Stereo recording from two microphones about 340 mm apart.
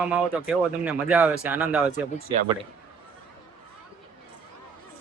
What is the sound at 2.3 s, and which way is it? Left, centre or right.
Speech, centre.